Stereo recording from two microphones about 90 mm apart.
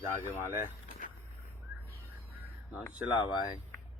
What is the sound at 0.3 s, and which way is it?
Speech, 25° right (ahead or behind).